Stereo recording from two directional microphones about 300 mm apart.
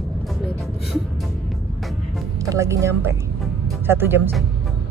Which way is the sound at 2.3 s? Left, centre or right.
Centre.